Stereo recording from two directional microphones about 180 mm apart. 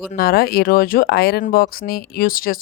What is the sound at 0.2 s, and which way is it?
Speech, 55° left (ahead or behind).